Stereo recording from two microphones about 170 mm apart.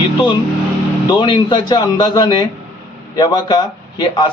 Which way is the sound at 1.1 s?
25° left (ahead or behind).